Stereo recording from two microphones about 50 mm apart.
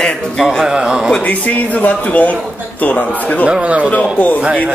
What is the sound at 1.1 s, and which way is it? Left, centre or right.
Speech, left.